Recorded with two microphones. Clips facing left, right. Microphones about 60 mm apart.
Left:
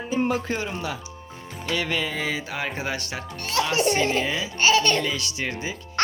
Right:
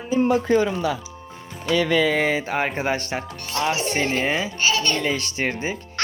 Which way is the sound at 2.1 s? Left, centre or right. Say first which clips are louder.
Right 7 dB; right.